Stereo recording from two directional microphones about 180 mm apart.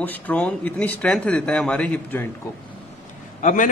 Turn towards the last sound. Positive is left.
turn(degrees=45)  # may be behind; listen again after turning